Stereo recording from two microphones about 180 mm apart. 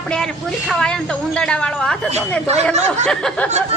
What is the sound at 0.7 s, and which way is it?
A woman's voice, 5° left (ahead or behind).